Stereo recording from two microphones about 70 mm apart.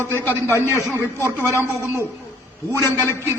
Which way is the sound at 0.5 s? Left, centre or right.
Right.